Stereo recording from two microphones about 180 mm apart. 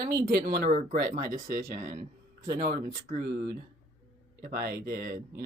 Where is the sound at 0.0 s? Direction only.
60° right (ahead or behind).